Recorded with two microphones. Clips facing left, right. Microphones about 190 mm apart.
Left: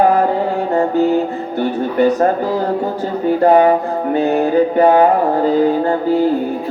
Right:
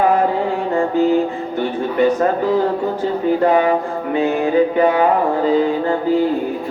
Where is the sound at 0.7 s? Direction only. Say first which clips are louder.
Left 1 dB; 40° left (ahead or behind).